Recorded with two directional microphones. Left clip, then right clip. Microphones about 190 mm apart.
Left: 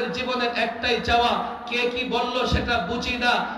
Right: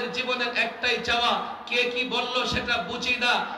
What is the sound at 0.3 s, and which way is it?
A man's voice, 10° right (ahead or behind).